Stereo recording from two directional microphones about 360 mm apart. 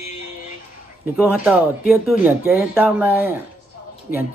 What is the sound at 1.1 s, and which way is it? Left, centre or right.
Speech, centre.